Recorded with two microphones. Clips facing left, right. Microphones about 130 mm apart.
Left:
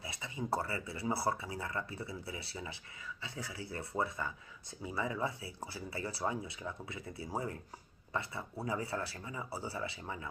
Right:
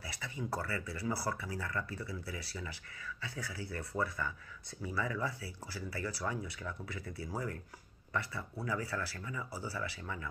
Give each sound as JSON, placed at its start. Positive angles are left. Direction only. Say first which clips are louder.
{"t": 0.0, "sound": "speech", "louder": "left 1 dB", "side_deg": 20}